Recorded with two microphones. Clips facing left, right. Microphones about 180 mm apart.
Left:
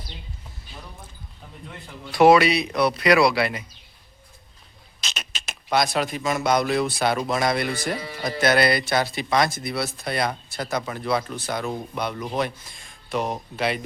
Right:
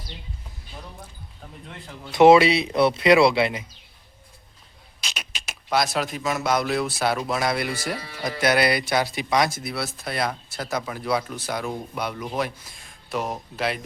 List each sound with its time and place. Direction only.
2.1 s speech: 25° right (ahead or behind)
4.9 s a sound: 10° right (ahead or behind)
5.7 s speech: centre (ahead or behind)